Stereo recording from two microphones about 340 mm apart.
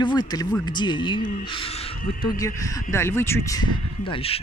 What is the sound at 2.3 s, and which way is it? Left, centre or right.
Speech, centre.